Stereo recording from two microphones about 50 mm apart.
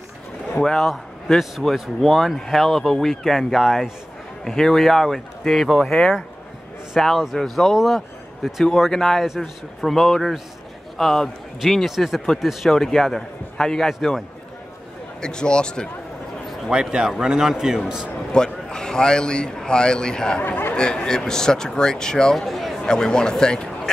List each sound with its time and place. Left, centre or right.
0.6 s a man's voice: centre
9.2 s speech: centre
9.8 s speech: centre
12.7 s a man's voice: centre
15.1 s a man's voice: centre
16.9 s a man's voice: centre
18.3 s a man's voice: centre
20.4 s speech: left
20.7 s a man's voice: centre
22.8 s a man's voice: centre